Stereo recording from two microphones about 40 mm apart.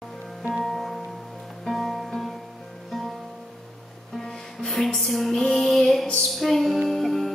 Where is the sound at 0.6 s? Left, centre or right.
Centre.